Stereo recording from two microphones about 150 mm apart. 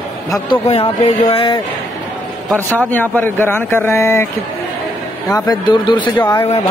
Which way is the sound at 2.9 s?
10° left (ahead or behind).